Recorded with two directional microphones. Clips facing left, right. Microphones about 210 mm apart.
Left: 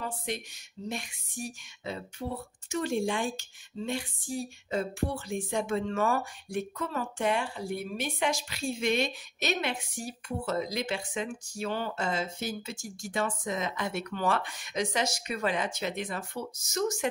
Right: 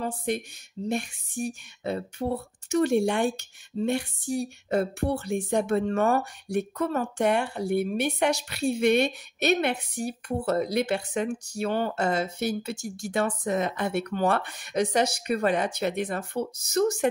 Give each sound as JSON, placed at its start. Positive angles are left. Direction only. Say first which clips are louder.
{"t": 0.0, "sound": "speech", "louder": "right 7 dB", "side_deg": -50}